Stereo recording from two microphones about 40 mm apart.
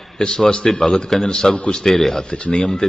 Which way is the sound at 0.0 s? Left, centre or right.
Centre.